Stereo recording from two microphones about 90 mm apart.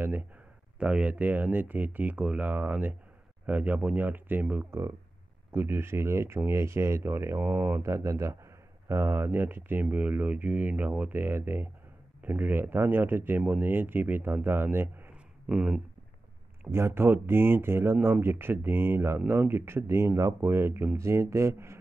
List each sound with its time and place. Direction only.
0.7 s speech: 15° right (ahead or behind)
7.8 s speech: 35° right (ahead or behind)
15.4 s speech: 10° right (ahead or behind)
16.7 s speech: 25° right (ahead or behind)